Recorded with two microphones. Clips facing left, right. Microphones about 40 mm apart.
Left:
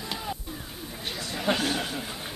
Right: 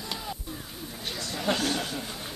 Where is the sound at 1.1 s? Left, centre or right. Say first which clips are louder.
Left 1 dB; centre.